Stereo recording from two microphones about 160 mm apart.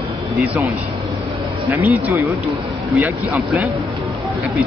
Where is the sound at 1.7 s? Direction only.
15° right (ahead or behind).